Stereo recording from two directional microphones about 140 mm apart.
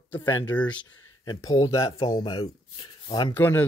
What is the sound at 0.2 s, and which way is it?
Speech, 30° left (ahead or behind).